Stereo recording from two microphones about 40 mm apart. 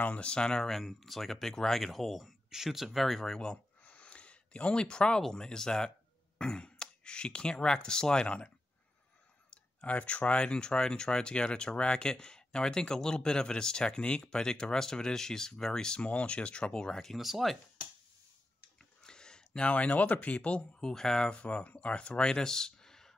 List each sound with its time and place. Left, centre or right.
0.2 s speech: left
0.7 s speech: centre
3.0 s speech: centre
3.8 s a sound: left
5.2 s speech: centre
9.5 s a sound: left
9.9 s speech: left
16.1 s speech: left
17.2 s speech: centre
19.0 s a sound: centre
19.7 s speech: left
20.8 s speech: centre
21.4 s speech: left; by 23.1 s centre